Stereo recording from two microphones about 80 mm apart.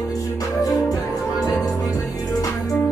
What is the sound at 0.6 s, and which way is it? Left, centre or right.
Music, left.